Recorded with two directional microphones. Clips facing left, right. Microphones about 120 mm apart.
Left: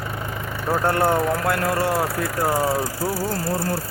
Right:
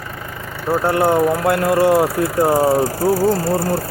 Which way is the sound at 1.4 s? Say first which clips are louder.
Right 7 dB; 20° right (ahead or behind).